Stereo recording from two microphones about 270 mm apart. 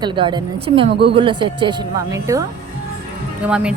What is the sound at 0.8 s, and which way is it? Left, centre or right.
Speech, right.